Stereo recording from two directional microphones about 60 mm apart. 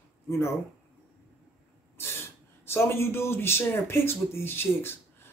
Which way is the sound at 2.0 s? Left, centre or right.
Left.